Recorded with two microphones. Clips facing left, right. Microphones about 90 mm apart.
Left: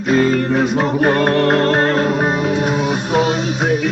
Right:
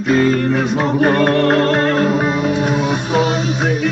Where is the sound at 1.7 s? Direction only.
35° left (ahead or behind).